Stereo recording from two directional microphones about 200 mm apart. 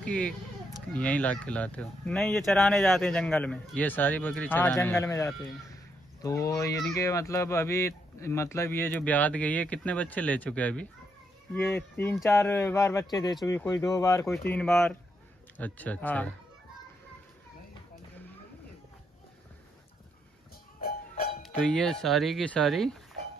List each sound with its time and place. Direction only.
0.0 s speech: 5° left (ahead or behind)
21.4 s speech: 5° left (ahead or behind)